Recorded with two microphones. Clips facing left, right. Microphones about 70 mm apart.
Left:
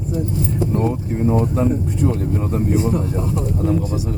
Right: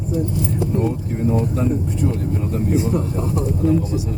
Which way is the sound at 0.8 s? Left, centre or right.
Left.